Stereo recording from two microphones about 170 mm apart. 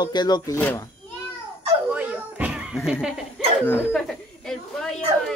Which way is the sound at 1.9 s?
10° right (ahead or behind).